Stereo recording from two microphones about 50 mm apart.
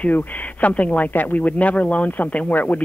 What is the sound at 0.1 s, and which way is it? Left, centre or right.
Speech, left.